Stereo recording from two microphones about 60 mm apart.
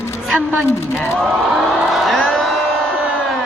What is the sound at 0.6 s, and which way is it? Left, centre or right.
Speech, left.